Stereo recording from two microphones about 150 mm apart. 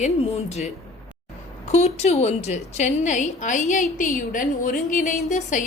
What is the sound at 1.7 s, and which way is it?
A woman's voice, 45° left (ahead or behind).